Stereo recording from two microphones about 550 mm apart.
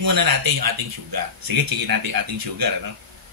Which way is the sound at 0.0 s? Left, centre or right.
Right.